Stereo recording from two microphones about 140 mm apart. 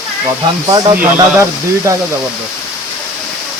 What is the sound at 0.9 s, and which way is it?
Speech, 20° right (ahead or behind).